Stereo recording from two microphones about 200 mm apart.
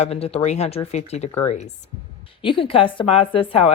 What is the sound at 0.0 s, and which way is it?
Speech, 30° left (ahead or behind).